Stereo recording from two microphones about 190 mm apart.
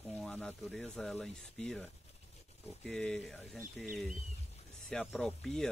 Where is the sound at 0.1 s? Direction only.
5° left (ahead or behind).